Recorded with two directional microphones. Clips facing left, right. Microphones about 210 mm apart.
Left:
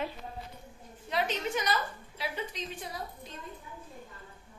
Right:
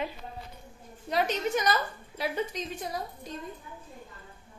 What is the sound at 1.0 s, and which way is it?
A woman's voice, 45° right (ahead or behind).